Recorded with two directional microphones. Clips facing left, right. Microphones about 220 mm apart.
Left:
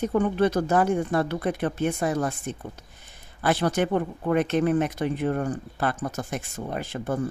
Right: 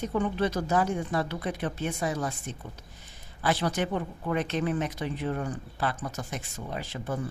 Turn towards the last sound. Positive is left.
turn(degrees=50)  # may be behind; listen again after turning